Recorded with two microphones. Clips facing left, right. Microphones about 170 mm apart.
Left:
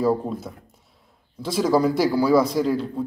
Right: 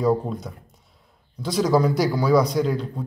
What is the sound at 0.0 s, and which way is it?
A man's voice, centre (ahead or behind).